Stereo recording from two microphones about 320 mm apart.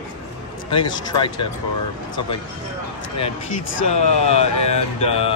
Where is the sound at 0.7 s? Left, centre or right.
Centre.